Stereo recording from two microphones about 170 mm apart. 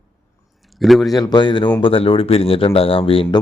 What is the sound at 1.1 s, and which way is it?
Speech, 25° left (ahead or behind).